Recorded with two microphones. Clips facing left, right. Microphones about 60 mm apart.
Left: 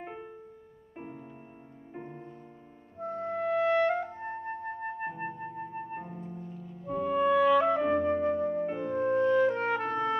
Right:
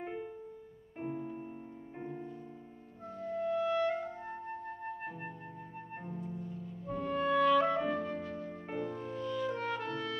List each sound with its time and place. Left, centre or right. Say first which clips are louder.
1.0 s music: right 7 dB; centre
3.0 s music: left 5 dB; left
6.9 s music: left 6 dB; centre; by 10.1 s left